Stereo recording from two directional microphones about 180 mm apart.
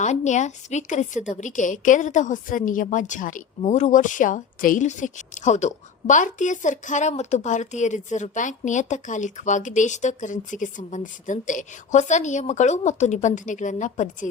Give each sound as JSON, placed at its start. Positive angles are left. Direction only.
{"t": 0.0, "sound": "a woman's voice", "side_deg": 40}